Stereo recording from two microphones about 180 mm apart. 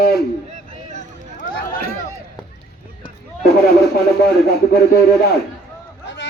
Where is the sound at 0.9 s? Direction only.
45° left (ahead or behind).